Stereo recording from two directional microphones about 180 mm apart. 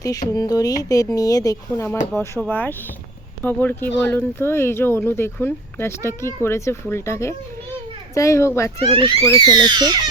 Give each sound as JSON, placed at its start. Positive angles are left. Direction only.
{"t": 0.0, "sound": "speech", "side_deg": 20}
{"t": 8.8, "sound": "speech", "side_deg": -30}